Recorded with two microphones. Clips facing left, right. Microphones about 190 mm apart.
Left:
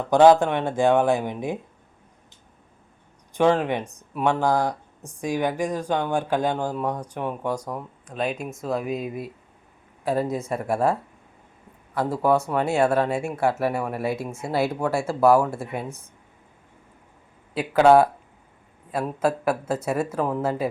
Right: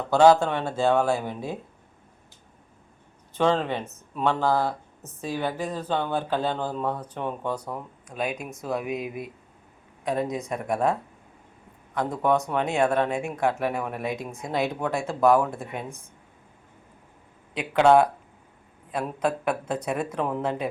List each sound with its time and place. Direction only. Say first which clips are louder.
0.1 s speech: left 2 dB; 15° left (ahead or behind)
3.3 s speech: left 3 dB; 15° left (ahead or behind)
8.0 s speech: left 3 dB; 10° right (ahead or behind)
12.1 s speech: left 2 dB; 5° left (ahead or behind)
17.5 s speech: left 3 dB; 5° left (ahead or behind)